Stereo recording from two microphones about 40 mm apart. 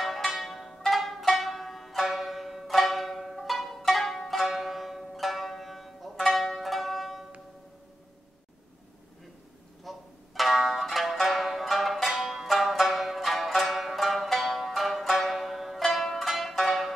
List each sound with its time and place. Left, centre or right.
0.0 s zither: centre
9.8 s music: centre